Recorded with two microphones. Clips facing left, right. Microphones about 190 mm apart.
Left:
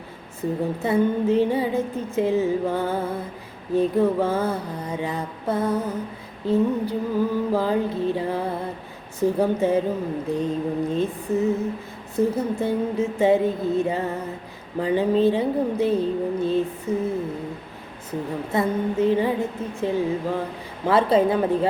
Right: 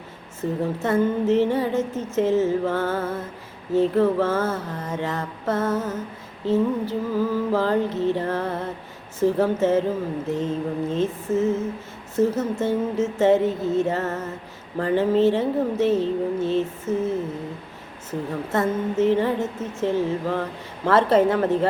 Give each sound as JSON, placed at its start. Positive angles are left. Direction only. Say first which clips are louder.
{"t": 0.8, "sound": "speech", "louder": "even", "side_deg": 15}